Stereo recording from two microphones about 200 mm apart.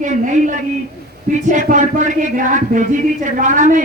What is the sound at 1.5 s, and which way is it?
A woman's voice, 40° right (ahead or behind).